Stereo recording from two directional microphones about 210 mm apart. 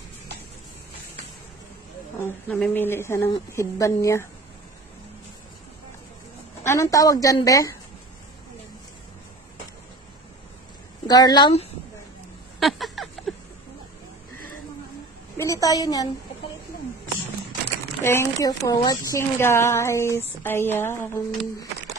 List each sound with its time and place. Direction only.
2.2 s speech: 5° left (ahead or behind)
6.6 s speech: 15° left (ahead or behind)
11.1 s speech: 20° left (ahead or behind)
12.5 s a sound: centre (ahead or behind)
15.3 s a woman's voice: 15° left (ahead or behind)
18.0 s speech: 10° left (ahead or behind)